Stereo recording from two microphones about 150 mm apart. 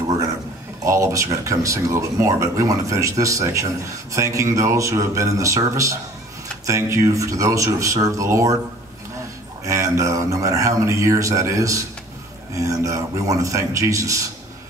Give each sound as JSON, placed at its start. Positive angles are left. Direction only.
{"t": 0.8, "sound": "speech", "side_deg": -20}
{"t": 9.7, "sound": "speech", "side_deg": -20}